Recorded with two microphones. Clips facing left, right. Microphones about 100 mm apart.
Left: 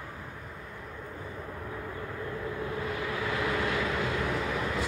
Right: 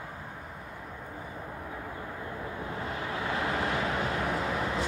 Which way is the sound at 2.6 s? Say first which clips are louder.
Left 1 dB; 30° right (ahead or behind).